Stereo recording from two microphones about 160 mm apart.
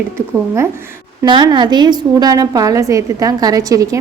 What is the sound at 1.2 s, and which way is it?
A woman's voice, 30° right (ahead or behind).